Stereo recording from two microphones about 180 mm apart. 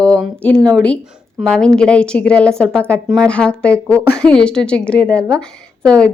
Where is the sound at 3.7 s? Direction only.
15° right (ahead or behind).